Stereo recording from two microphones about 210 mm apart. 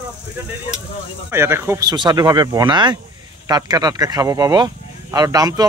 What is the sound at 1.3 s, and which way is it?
Speech, 10° right (ahead or behind).